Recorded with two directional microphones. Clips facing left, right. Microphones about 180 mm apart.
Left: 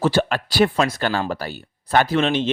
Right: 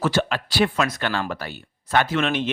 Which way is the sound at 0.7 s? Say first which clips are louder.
Left 3 dB; 30° left (ahead or behind).